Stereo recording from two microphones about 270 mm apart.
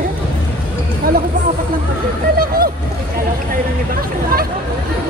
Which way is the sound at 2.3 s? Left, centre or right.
Right.